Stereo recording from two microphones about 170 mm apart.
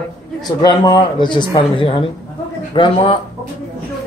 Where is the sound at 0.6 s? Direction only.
25° left (ahead or behind).